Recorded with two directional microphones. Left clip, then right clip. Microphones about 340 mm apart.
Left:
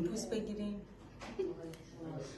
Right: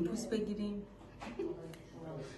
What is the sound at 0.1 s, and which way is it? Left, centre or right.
Speech, left.